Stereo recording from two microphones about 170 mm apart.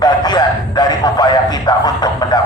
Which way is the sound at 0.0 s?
25° left (ahead or behind).